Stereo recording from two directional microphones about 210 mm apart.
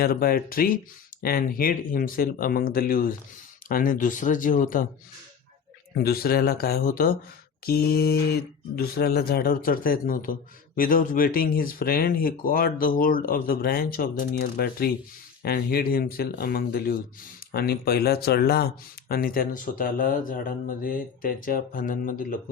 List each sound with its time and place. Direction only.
0.0 s speech: 45° left (ahead or behind)
6.0 s speech: 45° left (ahead or behind)